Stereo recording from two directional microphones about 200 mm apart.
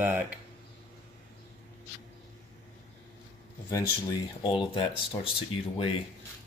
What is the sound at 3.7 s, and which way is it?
Speech, 20° left (ahead or behind).